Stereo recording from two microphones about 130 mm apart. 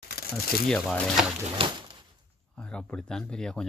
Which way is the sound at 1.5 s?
40° right (ahead or behind).